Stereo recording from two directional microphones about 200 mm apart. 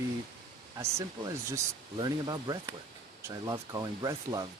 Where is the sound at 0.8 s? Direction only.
15° right (ahead or behind).